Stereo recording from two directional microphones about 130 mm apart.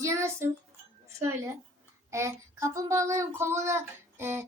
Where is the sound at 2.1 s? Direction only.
20° right (ahead or behind).